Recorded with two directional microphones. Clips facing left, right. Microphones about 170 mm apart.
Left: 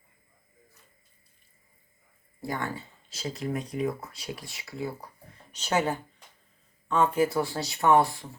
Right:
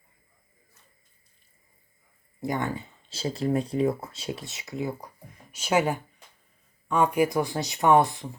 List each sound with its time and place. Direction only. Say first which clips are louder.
2.4 s speech: right 4 dB; 20° right (ahead or behind)